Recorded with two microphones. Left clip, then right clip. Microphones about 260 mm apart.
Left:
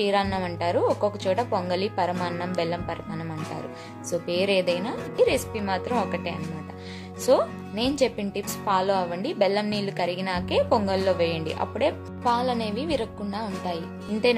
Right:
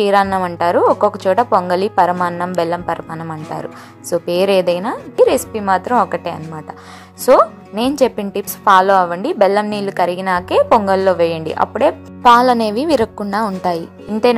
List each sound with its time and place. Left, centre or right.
0.0 s speech: right
4.1 s speech: right
12.3 s a woman's voice: right